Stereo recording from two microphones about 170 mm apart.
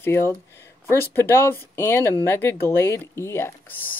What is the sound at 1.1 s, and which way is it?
Speech, 15° left (ahead or behind).